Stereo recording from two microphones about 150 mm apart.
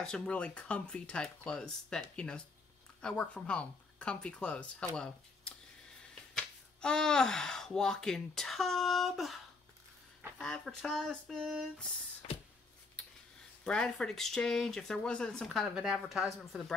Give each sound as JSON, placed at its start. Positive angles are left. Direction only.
{"t": 0.0, "sound": "speech", "side_deg": 5}
{"t": 10.4, "sound": "speech", "side_deg": 5}
{"t": 12.2, "sound": "a sound", "side_deg": 40}
{"t": 13.7, "sound": "speech", "side_deg": 5}